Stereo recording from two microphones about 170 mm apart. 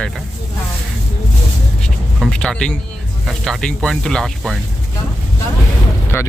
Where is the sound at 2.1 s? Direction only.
5° left (ahead or behind).